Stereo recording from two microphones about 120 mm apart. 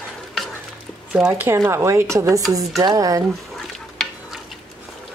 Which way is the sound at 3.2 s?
5° left (ahead or behind).